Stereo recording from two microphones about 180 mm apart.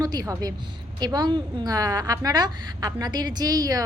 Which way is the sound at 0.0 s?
20° right (ahead or behind).